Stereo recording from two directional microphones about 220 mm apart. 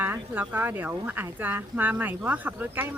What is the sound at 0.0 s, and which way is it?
Speech, 10° right (ahead or behind).